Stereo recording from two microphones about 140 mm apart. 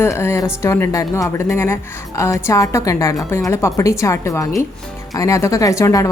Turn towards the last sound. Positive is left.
turn(degrees=25)  # may be behind; listen again after turning